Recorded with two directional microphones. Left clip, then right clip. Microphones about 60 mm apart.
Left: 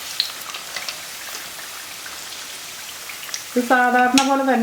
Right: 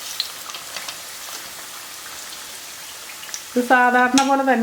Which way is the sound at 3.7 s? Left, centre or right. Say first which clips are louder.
Right 1 dB; right.